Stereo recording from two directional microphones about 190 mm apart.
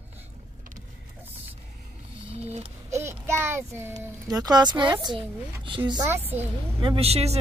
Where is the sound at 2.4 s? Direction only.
35° right (ahead or behind).